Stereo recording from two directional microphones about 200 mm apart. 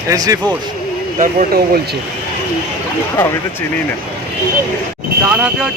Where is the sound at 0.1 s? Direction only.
15° right (ahead or behind).